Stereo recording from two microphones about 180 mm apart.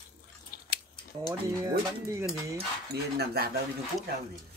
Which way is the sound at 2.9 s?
65° right (ahead or behind).